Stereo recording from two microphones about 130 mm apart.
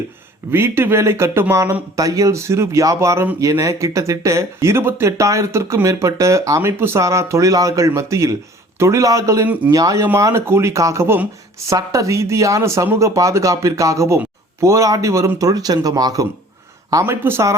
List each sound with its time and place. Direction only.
0.5 s speech: 20° right (ahead or behind)